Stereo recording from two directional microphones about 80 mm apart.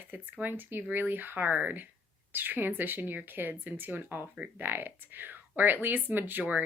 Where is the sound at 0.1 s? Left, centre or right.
Right.